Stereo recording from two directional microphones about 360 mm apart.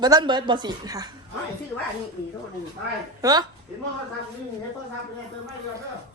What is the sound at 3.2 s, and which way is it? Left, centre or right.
Speech, centre.